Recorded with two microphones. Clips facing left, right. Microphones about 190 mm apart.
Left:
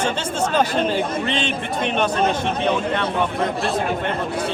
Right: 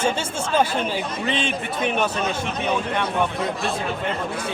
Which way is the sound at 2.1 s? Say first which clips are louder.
Left 5 dB; 55° left (ahead or behind).